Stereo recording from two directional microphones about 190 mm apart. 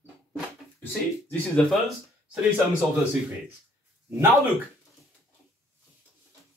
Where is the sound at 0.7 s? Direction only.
10° left (ahead or behind).